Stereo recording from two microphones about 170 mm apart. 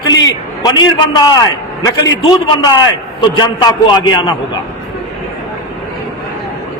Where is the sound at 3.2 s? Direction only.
25° left (ahead or behind).